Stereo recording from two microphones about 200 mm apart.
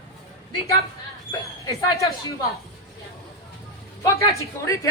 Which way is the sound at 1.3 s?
15° left (ahead or behind).